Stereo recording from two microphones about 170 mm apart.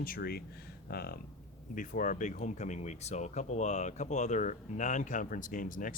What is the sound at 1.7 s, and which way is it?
Speech, 50° left (ahead or behind).